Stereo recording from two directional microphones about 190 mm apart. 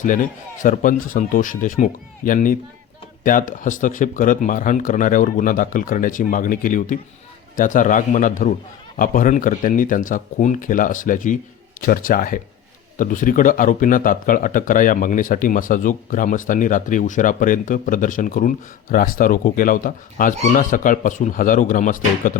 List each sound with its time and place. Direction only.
0.0 s speech: 45° left (ahead or behind)